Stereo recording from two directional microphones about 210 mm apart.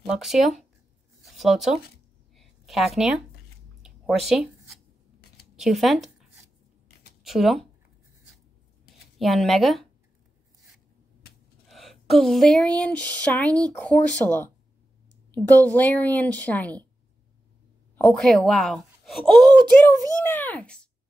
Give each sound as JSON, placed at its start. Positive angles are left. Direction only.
{"t": 0.0, "sound": "speech", "side_deg": 0}
{"t": 1.2, "sound": "a sound", "side_deg": 0}
{"t": 5.6, "sound": "speech", "side_deg": 0}
{"t": 7.2, "sound": "speech", "side_deg": 0}
{"t": 9.2, "sound": "speech", "side_deg": 0}
{"t": 11.7, "sound": "a woman's voice", "side_deg": 0}
{"t": 17.9, "sound": "speech", "side_deg": 0}
{"t": 19.4, "sound": "speech", "side_deg": -20}
{"t": 20.2, "sound": "a woman's voice", "side_deg": 10}